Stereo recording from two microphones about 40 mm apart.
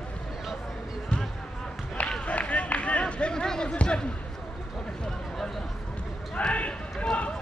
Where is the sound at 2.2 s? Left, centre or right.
Left.